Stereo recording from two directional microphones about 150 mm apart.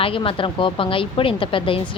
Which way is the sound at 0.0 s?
35° left (ahead or behind).